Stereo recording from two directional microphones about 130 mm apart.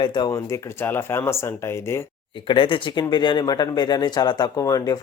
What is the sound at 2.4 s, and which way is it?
Speech, 40° left (ahead or behind).